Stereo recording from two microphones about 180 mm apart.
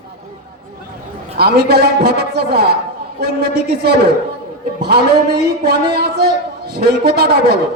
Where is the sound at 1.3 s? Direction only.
60° right (ahead or behind).